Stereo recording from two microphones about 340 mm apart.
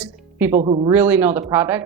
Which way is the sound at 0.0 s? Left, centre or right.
Centre.